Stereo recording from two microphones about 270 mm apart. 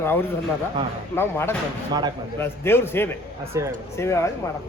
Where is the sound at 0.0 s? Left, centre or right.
Centre.